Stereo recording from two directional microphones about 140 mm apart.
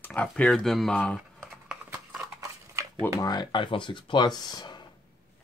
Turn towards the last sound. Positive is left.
turn(degrees=30)  # may be behind; listen again after turning